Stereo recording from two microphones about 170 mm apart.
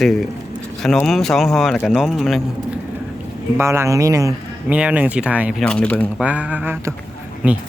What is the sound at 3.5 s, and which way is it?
A man's voice, 15° right (ahead or behind).